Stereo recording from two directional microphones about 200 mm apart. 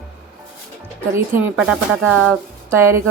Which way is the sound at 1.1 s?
10° right (ahead or behind).